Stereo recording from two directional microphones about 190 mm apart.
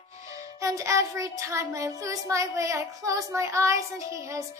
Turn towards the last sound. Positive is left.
turn(degrees=-15)  # may be behind; listen again after turning